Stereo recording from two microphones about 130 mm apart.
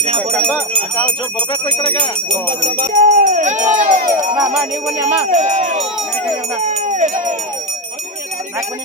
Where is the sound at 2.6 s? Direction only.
90° right.